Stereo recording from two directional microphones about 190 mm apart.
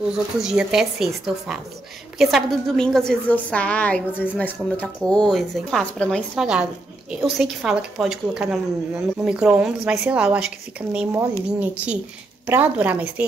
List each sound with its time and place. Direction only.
0.1 s a woman's voice: 5° right (ahead or behind)